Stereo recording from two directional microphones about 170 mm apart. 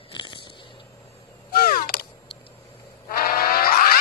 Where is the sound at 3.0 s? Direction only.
60° left (ahead or behind).